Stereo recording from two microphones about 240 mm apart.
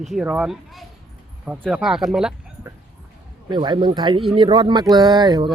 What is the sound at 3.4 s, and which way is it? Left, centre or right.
Speech, centre.